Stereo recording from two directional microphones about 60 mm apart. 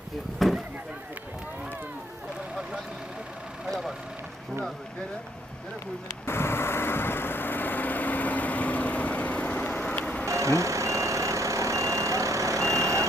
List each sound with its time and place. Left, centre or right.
0.3 s a sound: centre
3.7 s vehicle: centre
6.2 s vehicle: left
10.2 s reversing beeps: right